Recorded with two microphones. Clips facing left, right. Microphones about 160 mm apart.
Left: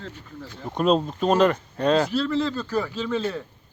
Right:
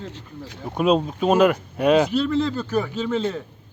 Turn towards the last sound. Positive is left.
turn(degrees=-20)  # may be behind; listen again after turning